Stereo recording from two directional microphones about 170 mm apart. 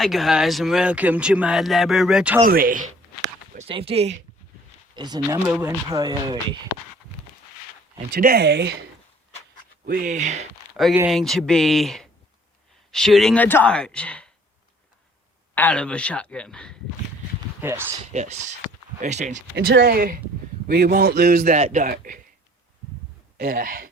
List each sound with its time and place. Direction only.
0.0 s speech: centre (ahead or behind)
2.4 s speech: 55° right (ahead or behind)
3.7 s speech: 35° right (ahead or behind)
4.9 s speech: 25° right (ahead or behind)
8.1 s speech: 65° right (ahead or behind); by 8.8 s 80° right
9.8 s speech: 55° right (ahead or behind)
10.8 s speech: 10° right (ahead or behind)
11.1 s speech: centre (ahead or behind)
15.5 s speech: 10° left (ahead or behind)
17.6 s speech: 15° right (ahead or behind)
18.1 s speech: 45° right (ahead or behind)
19.5 s a man's voice: 75° right (ahead or behind)
21.6 s speech: 45° right (ahead or behind)
23.4 s a man's voice: 55° right (ahead or behind)